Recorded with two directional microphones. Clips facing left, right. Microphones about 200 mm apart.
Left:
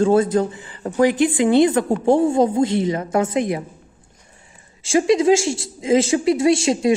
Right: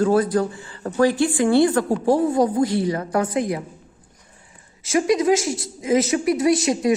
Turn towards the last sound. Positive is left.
turn(degrees=25)  # may be behind; listen again after turning